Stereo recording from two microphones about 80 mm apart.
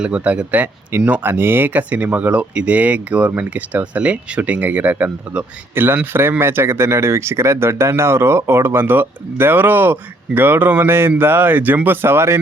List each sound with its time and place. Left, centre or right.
0.0 s speech: centre; by 12.4 s right